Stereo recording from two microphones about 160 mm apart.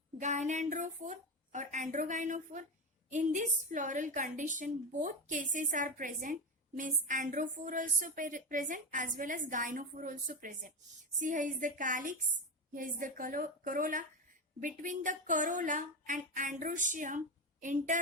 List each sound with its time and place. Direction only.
0.2 s a woman's voice: 50° right (ahead or behind)